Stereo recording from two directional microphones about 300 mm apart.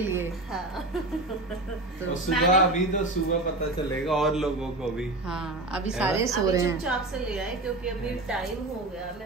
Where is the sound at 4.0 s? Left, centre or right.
Centre.